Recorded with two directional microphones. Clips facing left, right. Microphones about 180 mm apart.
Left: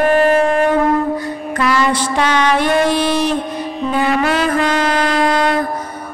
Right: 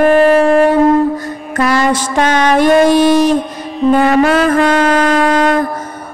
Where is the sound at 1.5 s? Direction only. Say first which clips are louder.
Right 3 dB; 45° right (ahead or behind).